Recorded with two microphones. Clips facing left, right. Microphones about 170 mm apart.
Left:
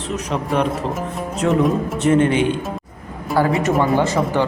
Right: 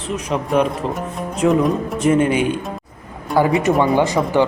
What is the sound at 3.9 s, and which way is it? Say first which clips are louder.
Speech: right 2 dB; 15° right (ahead or behind).